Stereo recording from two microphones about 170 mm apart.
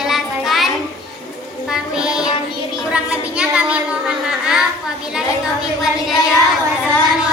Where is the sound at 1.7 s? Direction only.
5° right (ahead or behind).